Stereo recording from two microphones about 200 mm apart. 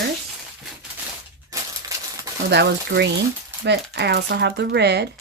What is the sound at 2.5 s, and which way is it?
Speech, 55° right (ahead or behind).